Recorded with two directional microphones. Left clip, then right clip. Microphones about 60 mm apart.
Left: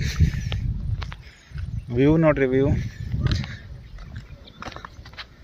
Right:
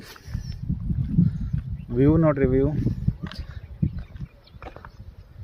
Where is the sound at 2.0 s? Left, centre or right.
Right.